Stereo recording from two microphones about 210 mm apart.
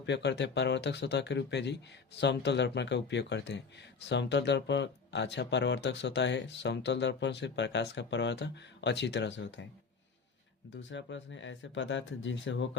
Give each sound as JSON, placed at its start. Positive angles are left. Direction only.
{"t": 0.0, "sound": "speech", "side_deg": 55}
{"t": 10.8, "sound": "speech", "side_deg": 60}